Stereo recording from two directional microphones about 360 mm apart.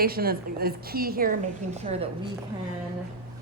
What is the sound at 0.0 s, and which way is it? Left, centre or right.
A woman's voice, right.